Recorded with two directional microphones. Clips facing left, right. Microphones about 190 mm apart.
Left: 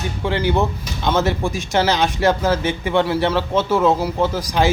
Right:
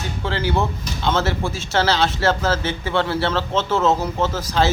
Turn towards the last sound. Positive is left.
turn(degrees=15)  # may be behind; listen again after turning